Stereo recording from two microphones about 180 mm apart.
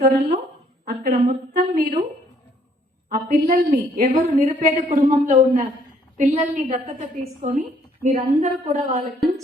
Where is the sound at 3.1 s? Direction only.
55° right (ahead or behind).